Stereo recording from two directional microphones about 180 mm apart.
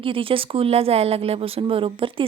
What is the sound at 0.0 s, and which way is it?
Speech, 30° right (ahead or behind).